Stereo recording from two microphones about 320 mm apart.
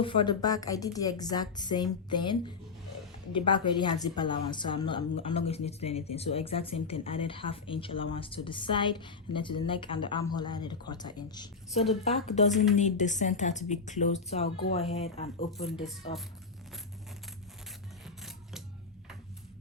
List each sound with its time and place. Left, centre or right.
0.0 s a woman's voice: centre
18.0 s rub: centre